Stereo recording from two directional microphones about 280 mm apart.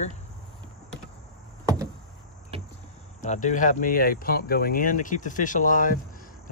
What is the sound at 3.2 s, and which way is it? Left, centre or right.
Speech, left.